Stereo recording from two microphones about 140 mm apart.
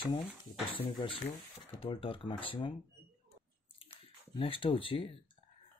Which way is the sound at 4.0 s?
40° left (ahead or behind).